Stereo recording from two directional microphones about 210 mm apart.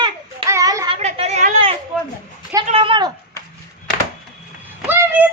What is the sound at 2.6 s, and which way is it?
Speech, 25° right (ahead or behind).